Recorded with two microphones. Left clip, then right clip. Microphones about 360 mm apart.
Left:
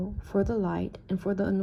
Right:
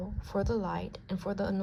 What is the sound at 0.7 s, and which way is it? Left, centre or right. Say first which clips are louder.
Speech: left 4 dB; centre.